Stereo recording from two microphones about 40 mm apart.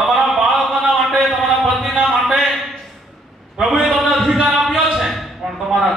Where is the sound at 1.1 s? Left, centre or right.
Centre.